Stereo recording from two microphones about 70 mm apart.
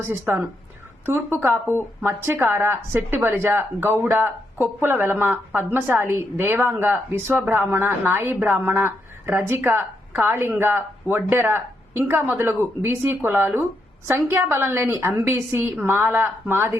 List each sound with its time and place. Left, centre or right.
0.0 s a woman's voice: right
5.8 s a woman's voice: right